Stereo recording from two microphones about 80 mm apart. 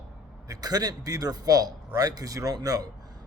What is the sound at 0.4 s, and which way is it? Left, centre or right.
A man's voice, right.